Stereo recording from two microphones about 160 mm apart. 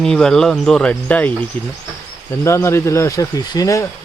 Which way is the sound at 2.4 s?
15° left (ahead or behind).